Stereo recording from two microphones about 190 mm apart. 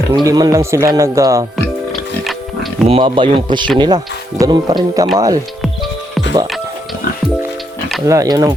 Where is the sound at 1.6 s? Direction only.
Centre (ahead or behind).